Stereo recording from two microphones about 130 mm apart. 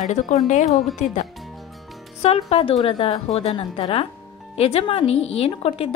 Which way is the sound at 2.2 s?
50° left (ahead or behind).